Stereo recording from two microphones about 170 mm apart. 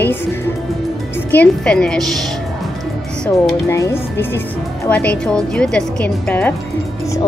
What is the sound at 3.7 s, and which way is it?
Speech, 15° left (ahead or behind).